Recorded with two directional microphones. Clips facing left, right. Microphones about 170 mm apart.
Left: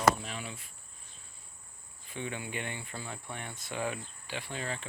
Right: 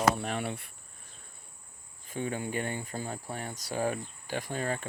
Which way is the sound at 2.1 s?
45° right (ahead or behind).